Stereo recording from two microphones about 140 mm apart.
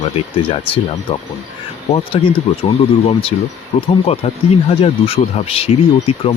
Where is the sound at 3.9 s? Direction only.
45° left (ahead or behind).